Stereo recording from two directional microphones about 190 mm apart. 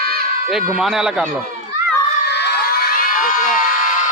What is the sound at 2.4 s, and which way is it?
Crowd, 60° left (ahead or behind).